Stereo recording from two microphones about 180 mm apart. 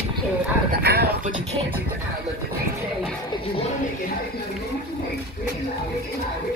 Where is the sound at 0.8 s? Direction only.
65° right (ahead or behind).